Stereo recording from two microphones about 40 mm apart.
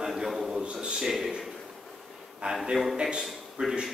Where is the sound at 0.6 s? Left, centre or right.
Right.